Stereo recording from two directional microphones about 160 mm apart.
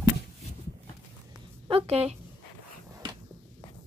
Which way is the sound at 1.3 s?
35° right (ahead or behind).